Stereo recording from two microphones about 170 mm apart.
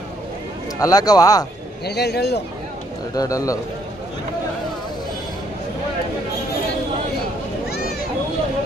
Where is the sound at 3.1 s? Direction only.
20° left (ahead or behind).